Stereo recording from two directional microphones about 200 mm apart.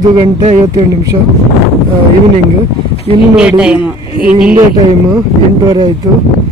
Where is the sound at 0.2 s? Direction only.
30° right (ahead or behind).